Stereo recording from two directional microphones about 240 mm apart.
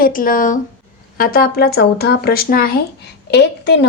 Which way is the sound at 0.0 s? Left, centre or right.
Left.